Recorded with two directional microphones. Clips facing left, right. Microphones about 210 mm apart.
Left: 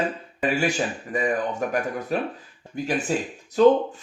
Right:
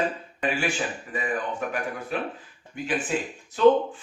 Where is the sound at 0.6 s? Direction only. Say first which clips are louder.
Left 4 dB; 40° left (ahead or behind).